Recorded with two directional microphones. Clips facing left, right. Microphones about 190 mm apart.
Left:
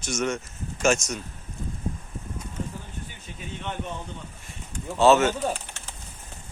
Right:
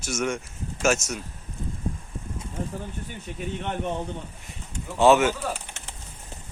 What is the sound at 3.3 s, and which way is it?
Speech, 60° right (ahead or behind).